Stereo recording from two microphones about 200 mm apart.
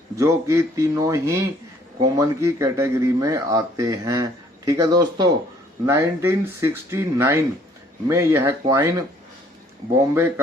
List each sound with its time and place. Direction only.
0.2 s speech: 15° right (ahead or behind)